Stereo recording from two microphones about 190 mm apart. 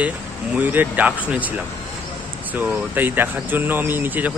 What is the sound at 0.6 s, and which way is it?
Speech, 10° right (ahead or behind).